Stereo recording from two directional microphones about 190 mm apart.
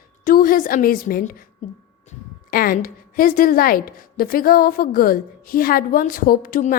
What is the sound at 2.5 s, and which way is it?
A woman's voice, 50° left (ahead or behind).